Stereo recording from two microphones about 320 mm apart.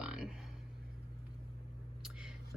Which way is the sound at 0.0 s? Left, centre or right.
Centre.